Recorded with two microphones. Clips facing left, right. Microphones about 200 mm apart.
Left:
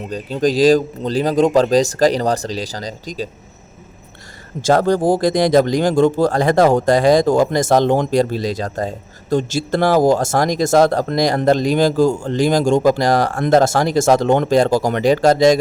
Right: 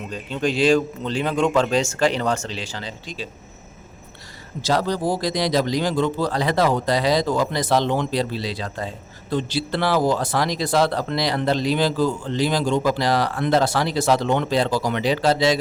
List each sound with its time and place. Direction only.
0.1 s speech: 40° left (ahead or behind)
4.6 s speech: 50° left (ahead or behind)